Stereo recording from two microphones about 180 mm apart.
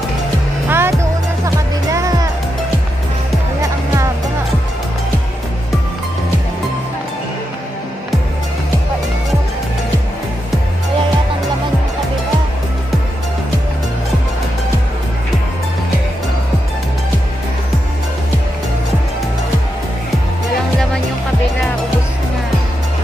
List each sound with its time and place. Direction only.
0.7 s music: 15° right (ahead or behind)